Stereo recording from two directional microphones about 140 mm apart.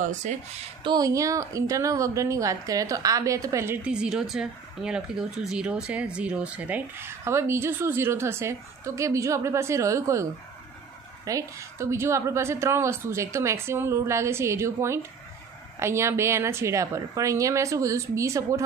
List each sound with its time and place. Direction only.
0.0 s speech: 60° right (ahead or behind)
0.8 s a woman's voice: 25° right (ahead or behind)
11.2 s a woman's voice: 20° right (ahead or behind)